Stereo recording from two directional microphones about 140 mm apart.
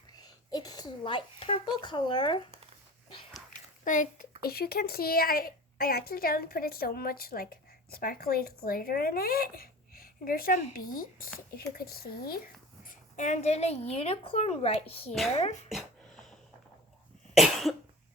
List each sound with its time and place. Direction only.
0.1 s a sound: 25° left (ahead or behind)
3.8 s a child's voice: 70° left (ahead or behind); by 12.4 s 90° left
13.1 s speech: 55° left (ahead or behind)
17.3 s cough: centre (ahead or behind)